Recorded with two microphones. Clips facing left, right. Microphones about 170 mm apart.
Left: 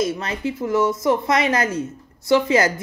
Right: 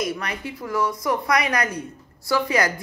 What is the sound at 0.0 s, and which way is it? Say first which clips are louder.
Speech: left 5 dB; 25° left (ahead or behind).